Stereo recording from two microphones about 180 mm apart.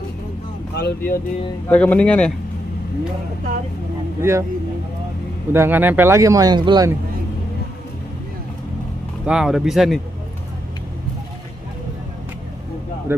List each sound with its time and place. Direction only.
0.7 s speech: 60° left (ahead or behind)
1.7 s speech: 10° left (ahead or behind)
4.2 s speech: 15° right (ahead or behind)
5.5 s speech: 10° right (ahead or behind)
9.2 s speech: 5° right (ahead or behind)